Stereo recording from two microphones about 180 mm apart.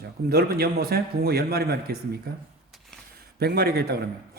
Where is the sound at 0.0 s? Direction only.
60° right (ahead or behind).